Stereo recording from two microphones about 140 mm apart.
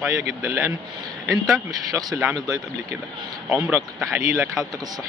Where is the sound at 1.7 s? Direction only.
25° right (ahead or behind).